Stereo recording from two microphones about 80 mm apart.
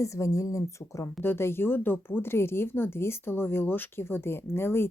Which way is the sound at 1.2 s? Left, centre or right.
Left.